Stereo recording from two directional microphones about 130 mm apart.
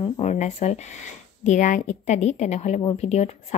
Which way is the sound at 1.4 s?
70° left (ahead or behind).